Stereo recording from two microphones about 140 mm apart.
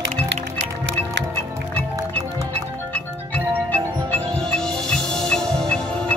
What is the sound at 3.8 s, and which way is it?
Music, 25° right (ahead or behind).